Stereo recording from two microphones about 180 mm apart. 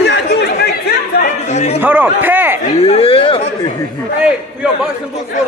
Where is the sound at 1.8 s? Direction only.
10° right (ahead or behind).